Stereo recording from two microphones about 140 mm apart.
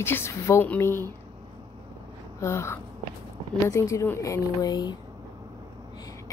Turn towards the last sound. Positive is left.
turn(degrees=30)  # may be behind; listen again after turning